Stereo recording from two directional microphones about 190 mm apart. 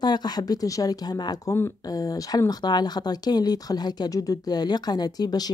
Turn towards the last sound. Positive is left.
turn(degrees=20)  # may be behind; listen again after turning